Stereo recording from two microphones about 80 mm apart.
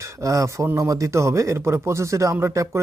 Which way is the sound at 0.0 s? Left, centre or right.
Right.